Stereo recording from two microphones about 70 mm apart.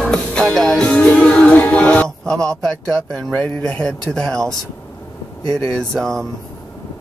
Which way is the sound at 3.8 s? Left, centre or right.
Centre.